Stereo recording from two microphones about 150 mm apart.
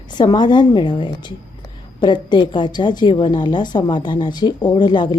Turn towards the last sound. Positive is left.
turn(degrees=30)  # may be behind; listen again after turning